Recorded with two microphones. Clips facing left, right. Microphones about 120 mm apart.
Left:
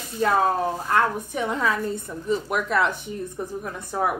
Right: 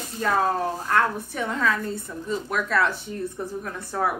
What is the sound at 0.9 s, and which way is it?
A woman's voice, 15° left (ahead or behind).